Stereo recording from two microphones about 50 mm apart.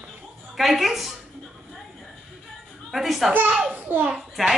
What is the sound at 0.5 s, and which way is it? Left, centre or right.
Speech, centre.